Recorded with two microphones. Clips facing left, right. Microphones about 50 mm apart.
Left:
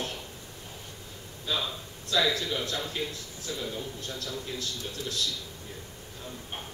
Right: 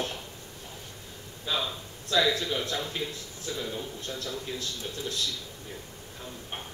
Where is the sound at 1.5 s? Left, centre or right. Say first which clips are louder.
Right 1 dB; right.